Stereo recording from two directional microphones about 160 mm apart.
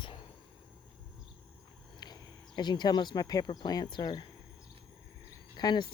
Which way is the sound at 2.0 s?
25° left (ahead or behind).